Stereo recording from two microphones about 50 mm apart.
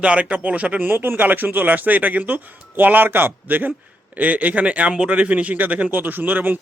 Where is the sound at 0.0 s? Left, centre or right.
Right.